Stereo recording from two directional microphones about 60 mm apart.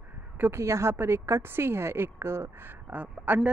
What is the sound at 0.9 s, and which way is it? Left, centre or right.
A woman's voice, right.